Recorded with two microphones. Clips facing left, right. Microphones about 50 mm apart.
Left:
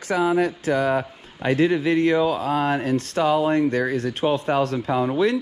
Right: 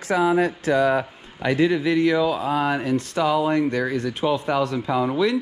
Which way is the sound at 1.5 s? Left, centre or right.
Left.